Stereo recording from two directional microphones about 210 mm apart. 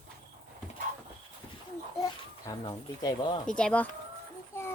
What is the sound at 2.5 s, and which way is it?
Speech, 20° left (ahead or behind).